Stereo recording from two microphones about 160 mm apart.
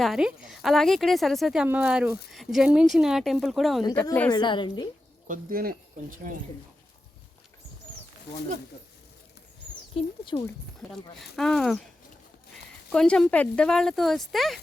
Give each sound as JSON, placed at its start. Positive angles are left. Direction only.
{"t": 0.0, "sound": "a woman's voice", "side_deg": -5}
{"t": 4.3, "sound": "a woman's voice", "side_deg": 30}
{"t": 5.3, "sound": "speech", "side_deg": -65}
{"t": 9.9, "sound": "speech", "side_deg": 30}
{"t": 10.8, "sound": "a woman's voice", "side_deg": 0}
{"t": 12.9, "sound": "a woman's voice", "side_deg": 5}